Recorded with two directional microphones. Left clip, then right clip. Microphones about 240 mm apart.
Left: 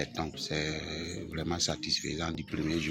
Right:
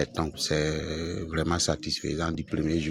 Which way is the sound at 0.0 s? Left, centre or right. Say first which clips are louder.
Right 6 dB; right.